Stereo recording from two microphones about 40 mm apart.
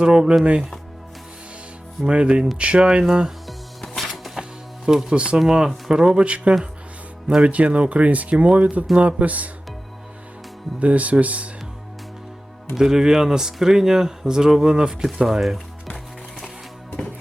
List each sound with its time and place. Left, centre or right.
0.0 s speech: right
2.0 s speech: right
3.0 s speech: centre
3.4 s music: centre
4.9 s speech: centre
5.1 s speech: right
6.2 s speech: right
10.8 s speech: right
12.7 s speech: centre